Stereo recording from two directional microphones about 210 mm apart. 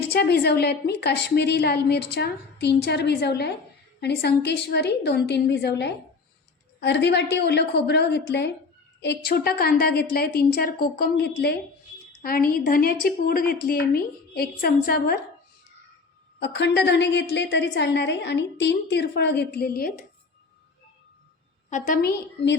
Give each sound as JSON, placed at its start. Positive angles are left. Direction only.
{"t": 0.0, "sound": "a woman's voice", "side_deg": 50}
{"t": 16.4, "sound": "a woman's voice", "side_deg": 55}
{"t": 21.7, "sound": "a woman's voice", "side_deg": 40}